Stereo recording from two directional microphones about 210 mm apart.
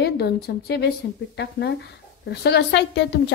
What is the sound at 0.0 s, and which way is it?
A woman's voice, 50° left (ahead or behind).